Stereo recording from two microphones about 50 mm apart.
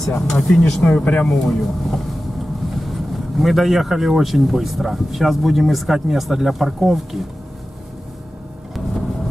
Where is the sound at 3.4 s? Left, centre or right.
Centre.